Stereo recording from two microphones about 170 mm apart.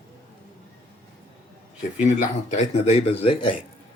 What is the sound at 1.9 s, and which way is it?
Speech, 45° left (ahead or behind).